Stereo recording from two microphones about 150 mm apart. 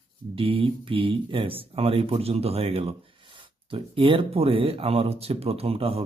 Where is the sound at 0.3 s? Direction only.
35° right (ahead or behind).